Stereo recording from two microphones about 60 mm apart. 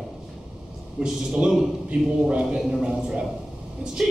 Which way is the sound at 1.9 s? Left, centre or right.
Centre.